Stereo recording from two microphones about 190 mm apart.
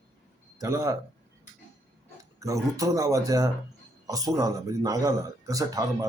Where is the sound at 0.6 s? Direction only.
15° right (ahead or behind).